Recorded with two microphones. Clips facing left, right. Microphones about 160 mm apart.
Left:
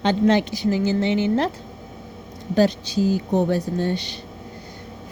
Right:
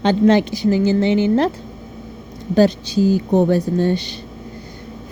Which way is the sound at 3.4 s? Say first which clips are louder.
Right 6 dB; 90° right.